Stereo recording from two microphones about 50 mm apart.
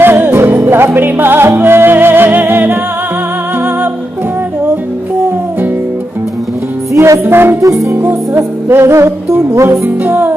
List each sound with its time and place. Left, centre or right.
0.0 s music: right
6.9 s music: right
7.2 s music: right
8.1 s music: right
9.3 s music: right